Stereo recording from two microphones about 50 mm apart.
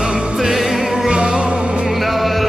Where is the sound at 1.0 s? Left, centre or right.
Centre.